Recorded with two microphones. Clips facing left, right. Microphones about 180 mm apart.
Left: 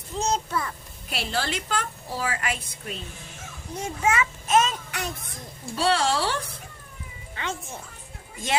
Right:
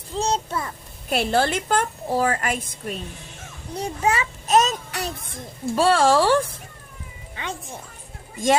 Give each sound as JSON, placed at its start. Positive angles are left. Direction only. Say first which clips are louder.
{"t": 0.2, "sound": "a sound", "louder": "right 2 dB", "side_deg": -30}
{"t": 1.1, "sound": "a child's voice", "louder": "right 8 dB", "side_deg": -50}
{"t": 3.8, "sound": "a child's voice", "louder": "right 2 dB", "side_deg": -35}
{"t": 5.7, "sound": "a child's voice", "louder": "right 6 dB", "side_deg": -45}
{"t": 7.3, "sound": "speech", "louder": "even", "side_deg": -15}